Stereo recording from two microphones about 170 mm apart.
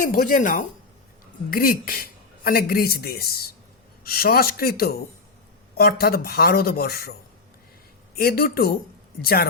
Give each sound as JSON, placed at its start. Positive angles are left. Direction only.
{"t": 0.0, "sound": "speech", "side_deg": 55}
{"t": 8.2, "sound": "speech", "side_deg": 65}